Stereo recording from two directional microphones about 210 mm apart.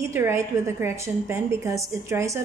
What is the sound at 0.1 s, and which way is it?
A woman's voice, 10° right (ahead or behind).